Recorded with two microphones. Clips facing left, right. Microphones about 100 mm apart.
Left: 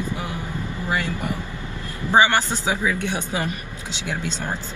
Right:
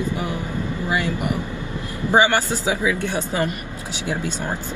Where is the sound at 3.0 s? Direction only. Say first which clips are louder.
Right 3 dB; 20° left (ahead or behind).